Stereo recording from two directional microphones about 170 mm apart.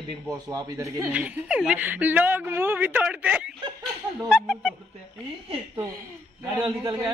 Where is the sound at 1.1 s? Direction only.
5° right (ahead or behind).